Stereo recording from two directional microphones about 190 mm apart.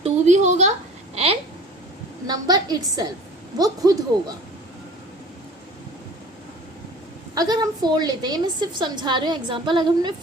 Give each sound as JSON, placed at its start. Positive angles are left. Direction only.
{"t": 0.0, "sound": "a sound", "side_deg": -40}
{"t": 2.2, "sound": "a woman's voice", "side_deg": -20}
{"t": 7.3, "sound": "a woman's voice", "side_deg": -20}